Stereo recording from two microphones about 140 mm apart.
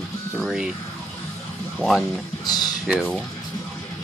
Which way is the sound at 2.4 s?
30° left (ahead or behind).